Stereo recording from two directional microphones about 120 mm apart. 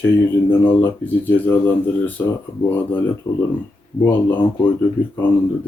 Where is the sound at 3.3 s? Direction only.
40° left (ahead or behind).